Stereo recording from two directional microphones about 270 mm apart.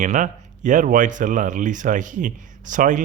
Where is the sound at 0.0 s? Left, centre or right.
Right.